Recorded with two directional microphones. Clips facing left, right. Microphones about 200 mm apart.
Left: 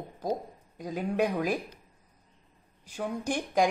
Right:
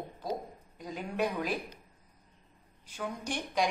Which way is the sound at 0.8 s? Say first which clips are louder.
Left 5 dB; 45° left (ahead or behind).